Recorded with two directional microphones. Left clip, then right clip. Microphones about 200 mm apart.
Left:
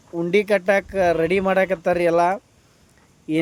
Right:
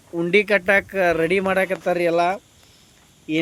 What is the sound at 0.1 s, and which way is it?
Speech, 5° left (ahead or behind).